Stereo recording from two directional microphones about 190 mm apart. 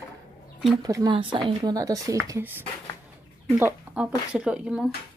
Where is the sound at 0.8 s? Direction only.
20° right (ahead or behind).